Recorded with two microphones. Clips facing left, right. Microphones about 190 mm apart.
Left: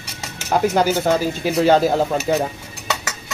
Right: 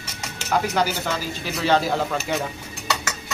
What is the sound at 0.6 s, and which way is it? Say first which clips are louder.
Speech: left 7 dB; 45° left (ahead or behind).